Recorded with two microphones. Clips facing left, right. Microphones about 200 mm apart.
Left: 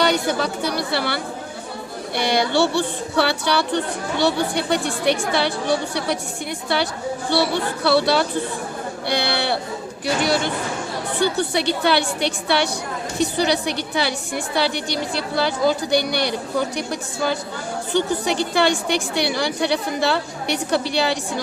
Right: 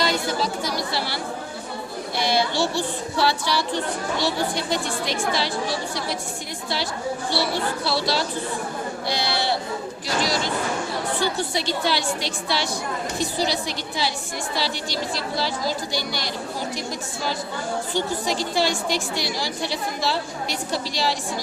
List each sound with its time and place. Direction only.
0.0 s a sound: 65° left (ahead or behind)
2.1 s a woman's voice: 65° left (ahead or behind)
7.9 s a woman's voice: 60° left (ahead or behind)
11.5 s a woman's voice: 65° left (ahead or behind)